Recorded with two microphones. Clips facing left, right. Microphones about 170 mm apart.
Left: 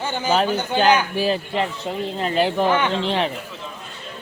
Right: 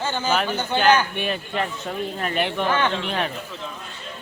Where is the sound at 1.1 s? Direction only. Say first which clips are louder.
Left 5 dB; 30° left (ahead or behind).